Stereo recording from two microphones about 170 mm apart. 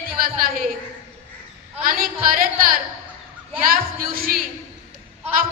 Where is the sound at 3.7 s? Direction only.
60° right (ahead or behind).